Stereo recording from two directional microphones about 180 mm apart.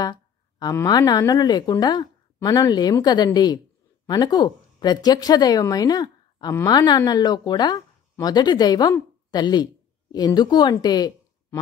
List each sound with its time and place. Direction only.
0.0 s a woman's voice: 20° left (ahead or behind)